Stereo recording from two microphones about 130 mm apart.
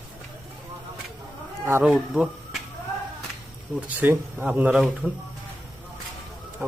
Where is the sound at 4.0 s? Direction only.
15° right (ahead or behind).